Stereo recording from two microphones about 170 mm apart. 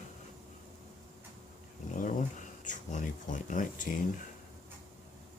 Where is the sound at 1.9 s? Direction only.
50° left (ahead or behind).